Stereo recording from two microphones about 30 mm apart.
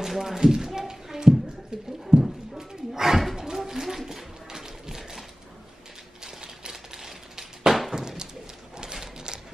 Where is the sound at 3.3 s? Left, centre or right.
Right.